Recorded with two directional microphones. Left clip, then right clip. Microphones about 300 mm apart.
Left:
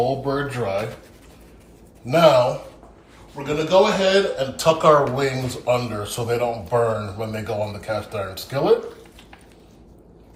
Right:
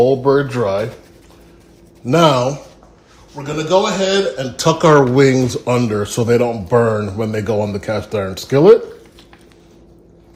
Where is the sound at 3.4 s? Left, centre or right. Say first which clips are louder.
Right 2 dB; right.